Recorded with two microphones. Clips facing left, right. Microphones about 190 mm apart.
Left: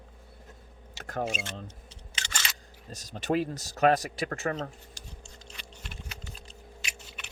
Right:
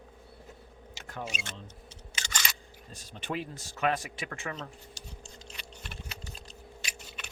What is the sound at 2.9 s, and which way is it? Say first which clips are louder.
Speech: left 8 dB; 40° left (ahead or behind).